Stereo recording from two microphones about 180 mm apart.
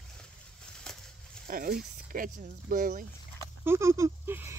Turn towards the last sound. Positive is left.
turn(degrees=-15)  # may be behind; listen again after turning